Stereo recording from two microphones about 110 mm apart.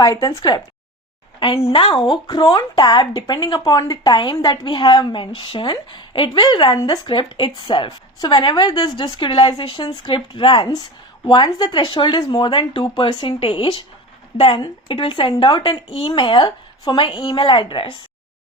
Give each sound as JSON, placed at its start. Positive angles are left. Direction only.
{"t": 0.0, "sound": "speech", "side_deg": 30}
{"t": 1.4, "sound": "a woman's voice", "side_deg": 60}
{"t": 2.2, "sound": "speech", "side_deg": 40}
{"t": 6.7, "sound": "speech", "side_deg": 35}
{"t": 7.1, "sound": "speech", "side_deg": 50}
{"t": 9.1, "sound": "a woman's voice", "side_deg": 50}
{"t": 15.9, "sound": "speech", "side_deg": 60}